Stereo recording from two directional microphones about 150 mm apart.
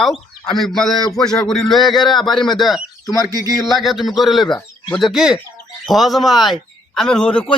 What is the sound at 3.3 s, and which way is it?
Speech, 25° right (ahead or behind).